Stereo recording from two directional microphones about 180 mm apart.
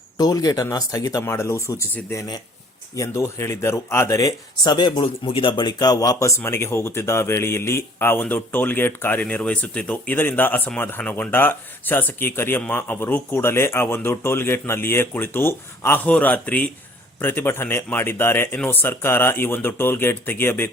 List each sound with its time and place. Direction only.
0.2 s speech: 20° left (ahead or behind)